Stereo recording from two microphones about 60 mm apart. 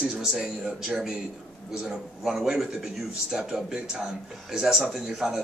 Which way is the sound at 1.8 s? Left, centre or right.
Centre.